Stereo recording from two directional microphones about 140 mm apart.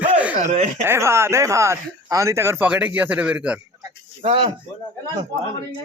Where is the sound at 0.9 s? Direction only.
20° right (ahead or behind).